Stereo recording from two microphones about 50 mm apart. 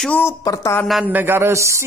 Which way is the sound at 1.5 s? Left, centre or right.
Right.